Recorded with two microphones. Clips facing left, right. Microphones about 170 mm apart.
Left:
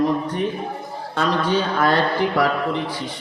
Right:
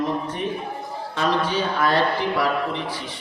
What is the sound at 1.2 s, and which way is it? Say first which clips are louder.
A man's voice: left 2 dB; 50° left (ahead or behind).